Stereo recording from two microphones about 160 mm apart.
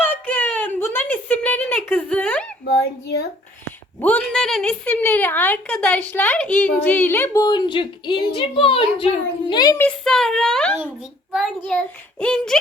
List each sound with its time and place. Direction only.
0.0 s a sound: 10° left (ahead or behind)
2.6 s speech: 90° left
4.0 s a woman's voice: 5° left (ahead or behind)
7.4 s speech: 25° left (ahead or behind)
9.7 s a child's voice: 5° left (ahead or behind)